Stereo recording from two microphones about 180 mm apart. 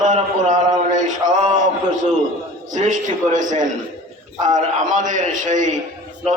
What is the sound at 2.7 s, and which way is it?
A man's voice, 45° right (ahead or behind).